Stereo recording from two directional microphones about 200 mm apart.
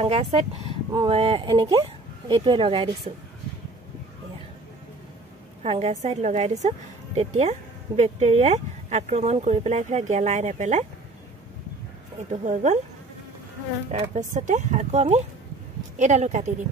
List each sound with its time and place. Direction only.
0.0 s speech: 30° right (ahead or behind)
5.6 s speech: 30° right (ahead or behind)
12.3 s speech: 35° right (ahead or behind)
14.1 s speech: 35° right (ahead or behind)